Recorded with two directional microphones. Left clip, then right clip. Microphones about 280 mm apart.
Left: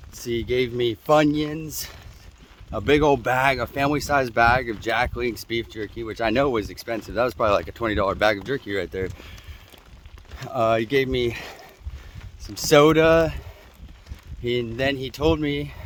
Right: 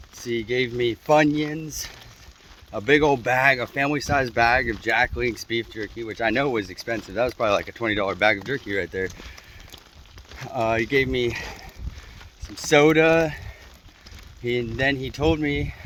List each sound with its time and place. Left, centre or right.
0.3 s speech: centre
10.4 s speech: centre
12.6 s speech: centre
14.4 s speech: centre